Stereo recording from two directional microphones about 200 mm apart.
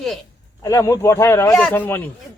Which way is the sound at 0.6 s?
15° left (ahead or behind).